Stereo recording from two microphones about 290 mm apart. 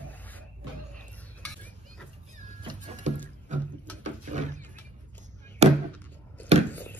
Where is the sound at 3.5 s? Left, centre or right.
Right.